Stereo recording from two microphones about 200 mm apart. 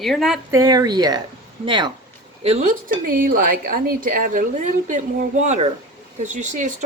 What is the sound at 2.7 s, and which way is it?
A woman's voice, 45° right (ahead or behind).